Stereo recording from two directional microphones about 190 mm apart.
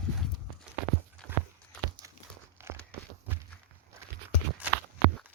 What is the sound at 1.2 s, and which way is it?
Clip-clop, 5° left (ahead or behind).